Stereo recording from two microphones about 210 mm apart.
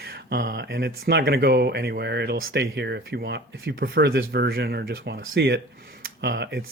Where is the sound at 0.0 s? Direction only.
50° right (ahead or behind).